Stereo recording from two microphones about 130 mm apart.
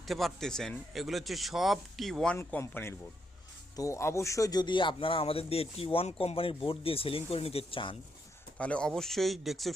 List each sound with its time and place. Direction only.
0.0 s speech: centre (ahead or behind); by 7.9 s 40° left (ahead or behind)
8.5 s speech: 10° left (ahead or behind)